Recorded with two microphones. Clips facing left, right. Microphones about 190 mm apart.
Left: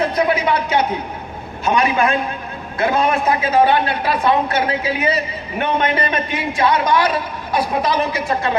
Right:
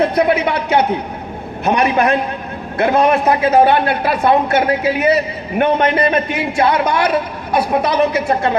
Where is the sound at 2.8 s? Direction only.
60° right (ahead or behind).